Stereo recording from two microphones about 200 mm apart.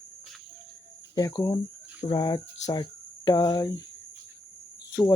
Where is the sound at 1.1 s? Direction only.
20° left (ahead or behind).